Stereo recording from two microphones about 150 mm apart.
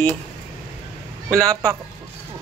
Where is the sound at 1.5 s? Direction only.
25° right (ahead or behind).